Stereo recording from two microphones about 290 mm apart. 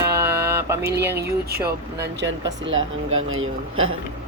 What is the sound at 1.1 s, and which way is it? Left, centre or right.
Speech, right.